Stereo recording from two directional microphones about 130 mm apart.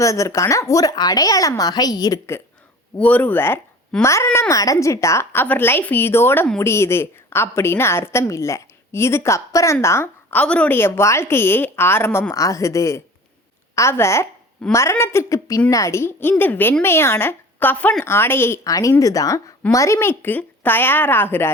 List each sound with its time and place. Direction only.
0.0 s a woman's voice: 25° left (ahead or behind)